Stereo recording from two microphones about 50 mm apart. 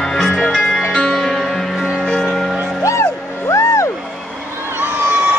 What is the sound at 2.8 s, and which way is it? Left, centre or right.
Music, left.